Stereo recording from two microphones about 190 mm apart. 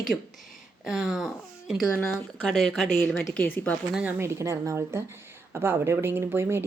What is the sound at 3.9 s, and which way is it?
Speech, 10° right (ahead or behind).